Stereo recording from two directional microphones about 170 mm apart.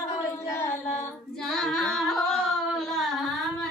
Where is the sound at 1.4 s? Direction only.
5° left (ahead or behind).